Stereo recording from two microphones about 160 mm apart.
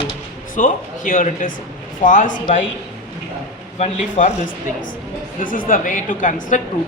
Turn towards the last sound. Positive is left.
turn(degrees=50)  # may be behind; listen again after turning